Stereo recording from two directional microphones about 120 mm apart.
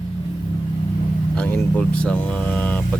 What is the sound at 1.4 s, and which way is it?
Speech, 15° left (ahead or behind).